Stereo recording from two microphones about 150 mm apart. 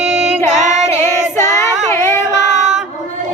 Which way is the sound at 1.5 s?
20° left (ahead or behind).